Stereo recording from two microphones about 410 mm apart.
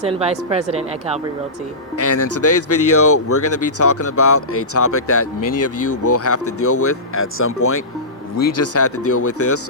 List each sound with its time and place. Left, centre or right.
0.0 s a woman's voice: centre
2.0 s speech: left